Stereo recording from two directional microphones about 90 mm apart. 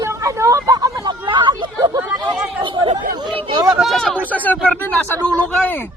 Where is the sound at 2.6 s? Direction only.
70° right (ahead or behind).